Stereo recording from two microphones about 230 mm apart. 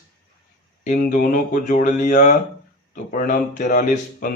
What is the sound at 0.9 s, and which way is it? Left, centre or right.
Speech, left.